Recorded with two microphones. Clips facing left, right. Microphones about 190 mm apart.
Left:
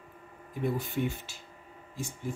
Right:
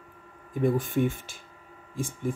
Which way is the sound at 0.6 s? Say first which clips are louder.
Right 6 dB; 45° right (ahead or behind).